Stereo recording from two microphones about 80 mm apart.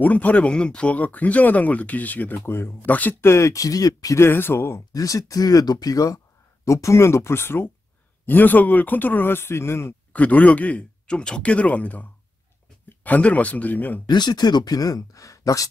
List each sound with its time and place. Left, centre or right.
0.0 s speech: centre
3.3 s speech: left
4.2 s speech: left
4.9 s speech: left
10.1 s speech: centre
14.0 s speech: left